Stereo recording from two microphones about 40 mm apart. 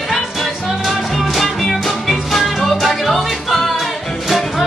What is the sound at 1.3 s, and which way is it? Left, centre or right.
Music, centre.